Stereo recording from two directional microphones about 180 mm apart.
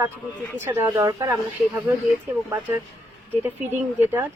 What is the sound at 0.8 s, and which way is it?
Speech, 15° right (ahead or behind).